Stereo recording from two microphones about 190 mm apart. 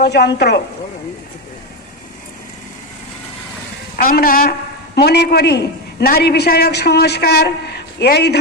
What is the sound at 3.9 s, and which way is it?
A woman's voice, 50° left (ahead or behind).